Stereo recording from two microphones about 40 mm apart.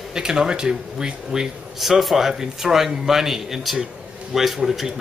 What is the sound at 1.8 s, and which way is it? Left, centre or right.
Speech, centre.